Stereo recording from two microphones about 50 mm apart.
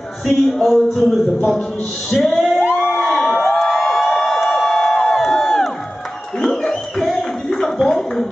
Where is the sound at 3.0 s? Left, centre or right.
Centre.